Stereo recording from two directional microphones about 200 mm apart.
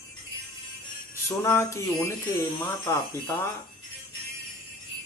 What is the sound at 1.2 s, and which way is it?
Speech, 15° left (ahead or behind).